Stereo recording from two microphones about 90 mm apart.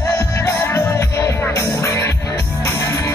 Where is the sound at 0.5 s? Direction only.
35° left (ahead or behind).